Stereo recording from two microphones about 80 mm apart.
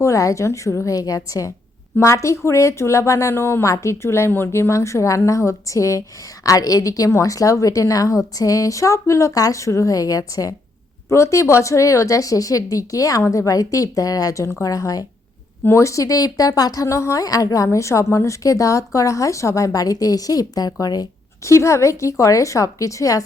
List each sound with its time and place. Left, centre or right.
0.0 s speech: left
0.9 s speech: left
11.1 s speech: left
21.4 s speech: left